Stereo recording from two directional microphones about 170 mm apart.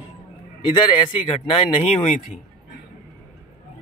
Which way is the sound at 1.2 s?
35° left (ahead or behind).